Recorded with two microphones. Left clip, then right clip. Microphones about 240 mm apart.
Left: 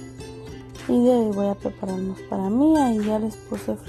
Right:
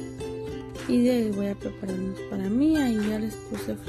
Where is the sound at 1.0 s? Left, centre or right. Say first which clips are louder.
Left 6 dB; centre.